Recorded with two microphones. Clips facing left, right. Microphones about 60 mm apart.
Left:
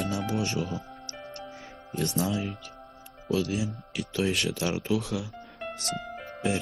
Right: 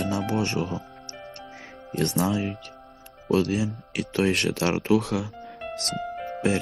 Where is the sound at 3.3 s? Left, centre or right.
Right.